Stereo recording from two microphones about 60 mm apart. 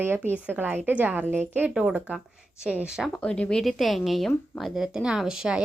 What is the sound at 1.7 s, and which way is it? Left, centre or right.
A woman's voice, centre.